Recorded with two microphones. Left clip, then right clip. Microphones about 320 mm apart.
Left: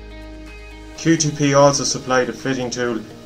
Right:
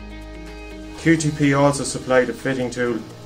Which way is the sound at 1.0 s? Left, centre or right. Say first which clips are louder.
Even; centre.